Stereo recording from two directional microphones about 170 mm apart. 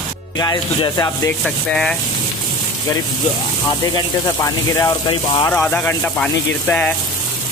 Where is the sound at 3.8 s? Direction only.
20° left (ahead or behind).